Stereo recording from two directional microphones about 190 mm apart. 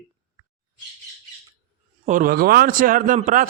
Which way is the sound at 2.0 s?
45° right (ahead or behind).